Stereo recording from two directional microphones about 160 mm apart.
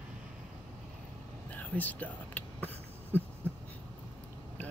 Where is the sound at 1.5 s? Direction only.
10° left (ahead or behind).